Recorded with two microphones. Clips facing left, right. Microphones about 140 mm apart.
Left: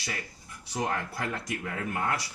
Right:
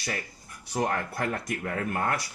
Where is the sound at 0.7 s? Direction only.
50° right (ahead or behind).